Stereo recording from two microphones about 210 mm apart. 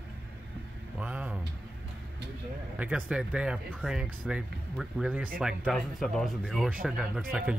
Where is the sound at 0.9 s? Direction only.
5° right (ahead or behind).